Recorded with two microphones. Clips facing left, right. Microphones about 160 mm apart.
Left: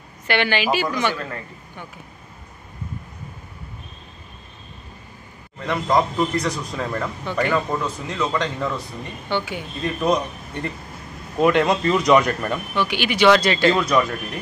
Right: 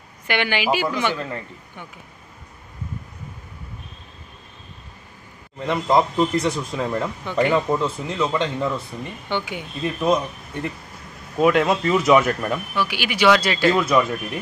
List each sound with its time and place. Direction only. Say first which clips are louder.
0.3 s speech: left 1 dB; 15° right (ahead or behind)
5.7 s a man's voice: right 1 dB; 25° right (ahead or behind)
6.8 s a man's voice: right 2 dB; 15° right (ahead or behind)